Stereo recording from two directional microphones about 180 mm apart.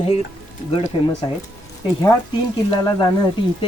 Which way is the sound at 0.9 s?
30° left (ahead or behind).